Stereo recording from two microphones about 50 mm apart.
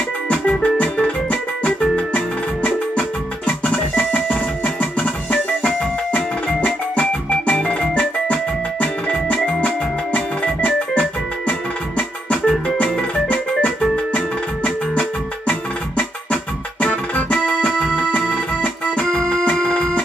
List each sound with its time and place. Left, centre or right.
0.3 s music: left
10.1 s organ: left
12.3 s music: left
14.1 s music: left
16.8 s music: left
17.6 s music: centre
18.3 s music: left